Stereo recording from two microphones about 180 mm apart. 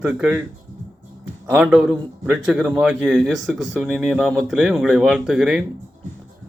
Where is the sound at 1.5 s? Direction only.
5° right (ahead or behind).